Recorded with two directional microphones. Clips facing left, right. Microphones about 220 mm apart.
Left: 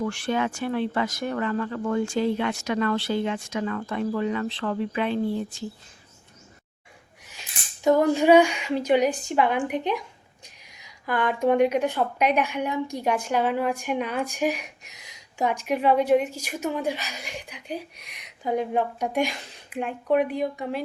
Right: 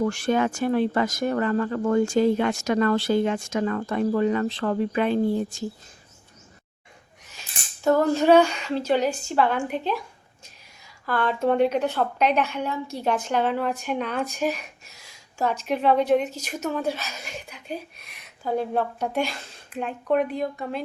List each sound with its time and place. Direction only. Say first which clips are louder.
0.0 s speech: right 4 dB; 40° right (ahead or behind)
7.9 s a woman's voice: even; 15° left (ahead or behind)